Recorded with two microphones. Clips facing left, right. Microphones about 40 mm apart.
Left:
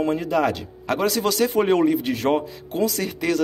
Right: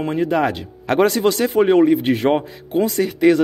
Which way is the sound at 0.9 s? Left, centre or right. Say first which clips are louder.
Right 7 dB; right.